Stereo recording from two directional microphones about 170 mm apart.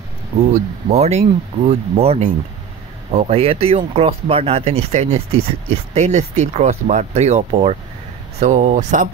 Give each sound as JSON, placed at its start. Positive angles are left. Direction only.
{"t": 0.5, "sound": "speech", "side_deg": -40}